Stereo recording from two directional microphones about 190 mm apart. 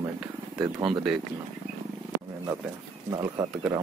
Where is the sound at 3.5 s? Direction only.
5° right (ahead or behind).